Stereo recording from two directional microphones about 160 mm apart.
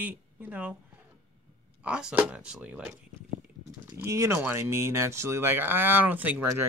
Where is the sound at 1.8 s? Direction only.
5° right (ahead or behind).